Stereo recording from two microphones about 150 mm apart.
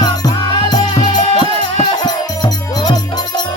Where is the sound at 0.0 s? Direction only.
30° left (ahead or behind).